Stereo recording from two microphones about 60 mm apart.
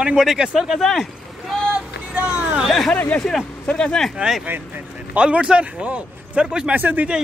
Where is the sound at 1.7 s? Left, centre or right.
Right.